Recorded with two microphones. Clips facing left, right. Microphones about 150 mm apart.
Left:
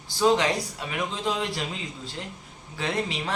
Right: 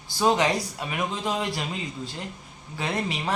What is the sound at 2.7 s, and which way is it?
Speech, 5° right (ahead or behind).